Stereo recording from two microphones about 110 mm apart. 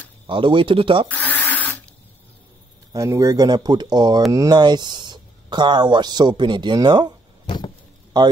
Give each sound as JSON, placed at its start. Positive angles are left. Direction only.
{"t": 0.3, "sound": "speech", "side_deg": -50}
{"t": 1.0, "sound": "speech", "side_deg": 15}
{"t": 1.5, "sound": "a sound", "side_deg": 15}
{"t": 2.9, "sound": "speech", "side_deg": -30}
{"t": 7.4, "sound": "vehicle", "side_deg": 45}